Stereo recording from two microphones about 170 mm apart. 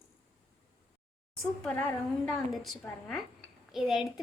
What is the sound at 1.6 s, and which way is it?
A woman's voice, 5° left (ahead or behind).